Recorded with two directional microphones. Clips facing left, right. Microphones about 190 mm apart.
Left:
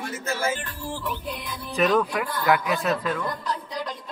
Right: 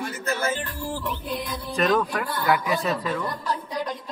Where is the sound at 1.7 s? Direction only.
5° left (ahead or behind).